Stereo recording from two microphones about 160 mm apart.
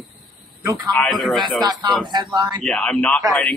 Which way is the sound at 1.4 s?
25° right (ahead or behind).